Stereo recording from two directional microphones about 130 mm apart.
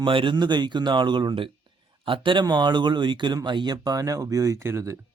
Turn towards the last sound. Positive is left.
turn(degrees=-20)  # may be behind; listen again after turning